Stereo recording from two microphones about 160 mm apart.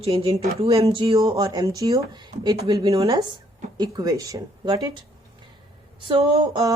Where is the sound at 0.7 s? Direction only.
20° right (ahead or behind).